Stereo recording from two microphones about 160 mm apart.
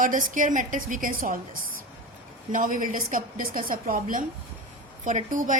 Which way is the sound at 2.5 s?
55° right (ahead or behind).